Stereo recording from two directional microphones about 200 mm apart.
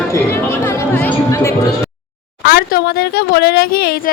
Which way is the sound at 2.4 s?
55° left (ahead or behind).